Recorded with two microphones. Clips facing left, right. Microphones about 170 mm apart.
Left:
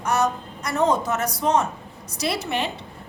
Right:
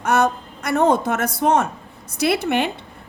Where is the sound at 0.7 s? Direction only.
60° right (ahead or behind).